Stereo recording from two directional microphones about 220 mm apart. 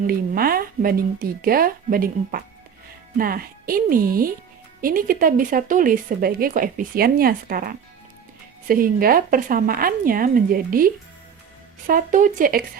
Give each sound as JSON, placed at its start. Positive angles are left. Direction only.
{"t": 0.1, "sound": "speech", "side_deg": -40}